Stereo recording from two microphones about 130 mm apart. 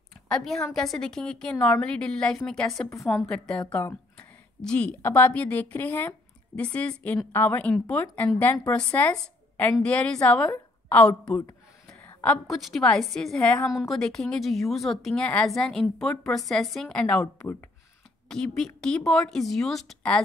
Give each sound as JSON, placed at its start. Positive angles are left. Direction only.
{"t": 0.3, "sound": "a woman's voice", "side_deg": 0}
{"t": 3.7, "sound": "speech", "side_deg": 20}
{"t": 4.6, "sound": "speech", "side_deg": 5}
{"t": 12.0, "sound": "a sound", "side_deg": 15}
{"t": 12.4, "sound": "a woman's voice", "side_deg": 0}